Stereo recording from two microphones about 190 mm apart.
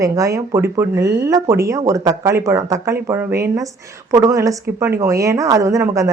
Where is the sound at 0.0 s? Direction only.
15° right (ahead or behind).